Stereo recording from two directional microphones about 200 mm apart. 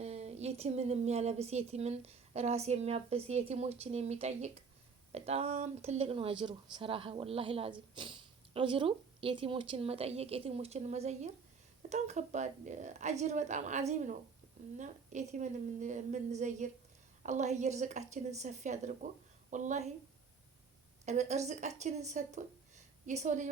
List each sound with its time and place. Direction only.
0.0 s a woman's voice: 30° right (ahead or behind)
21.0 s a woman's voice: 35° right (ahead or behind)